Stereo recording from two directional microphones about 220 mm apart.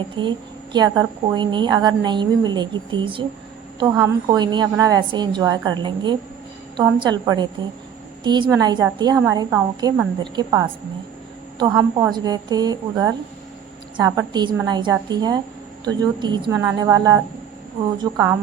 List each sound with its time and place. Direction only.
0.2 s a woman's voice: 20° right (ahead or behind)